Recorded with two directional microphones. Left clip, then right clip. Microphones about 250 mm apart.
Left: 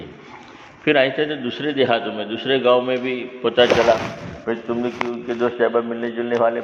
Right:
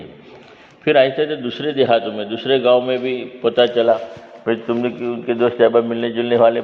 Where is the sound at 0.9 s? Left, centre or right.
Right.